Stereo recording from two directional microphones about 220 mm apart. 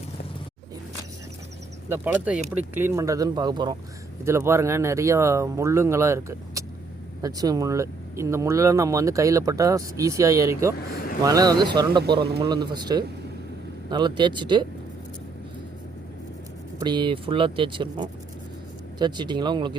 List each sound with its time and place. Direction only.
1.9 s speech: 5° right (ahead or behind)
10.8 s speech: 40° left (ahead or behind)
11.2 s speech: 15° right (ahead or behind)
16.8 s speech: 20° right (ahead or behind)